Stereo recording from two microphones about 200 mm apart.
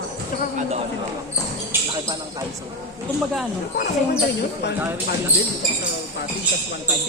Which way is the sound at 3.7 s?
50° left (ahead or behind).